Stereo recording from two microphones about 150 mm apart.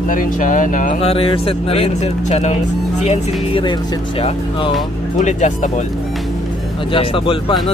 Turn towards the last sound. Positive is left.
turn(degrees=35)  # may be behind; listen again after turning